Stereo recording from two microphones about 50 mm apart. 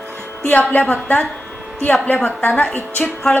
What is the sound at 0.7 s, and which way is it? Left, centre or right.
A woman's voice, left.